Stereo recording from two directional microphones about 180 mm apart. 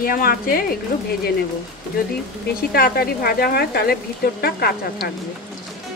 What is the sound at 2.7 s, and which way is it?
Speech, 60° left (ahead or behind).